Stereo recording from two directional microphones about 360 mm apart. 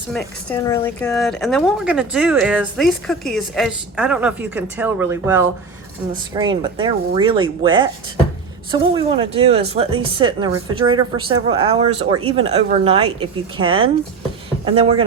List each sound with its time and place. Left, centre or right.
0.1 s speech: centre